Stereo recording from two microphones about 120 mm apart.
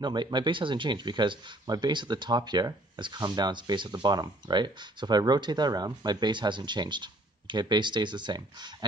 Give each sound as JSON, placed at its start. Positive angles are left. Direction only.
{"t": 0.0, "sound": "speech", "side_deg": -40}